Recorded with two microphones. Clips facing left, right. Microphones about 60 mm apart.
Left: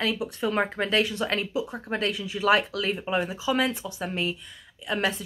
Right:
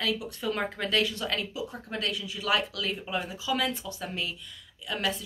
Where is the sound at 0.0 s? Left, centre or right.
Left.